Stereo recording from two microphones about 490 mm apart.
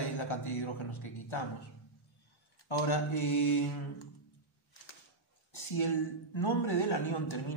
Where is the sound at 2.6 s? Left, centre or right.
Left.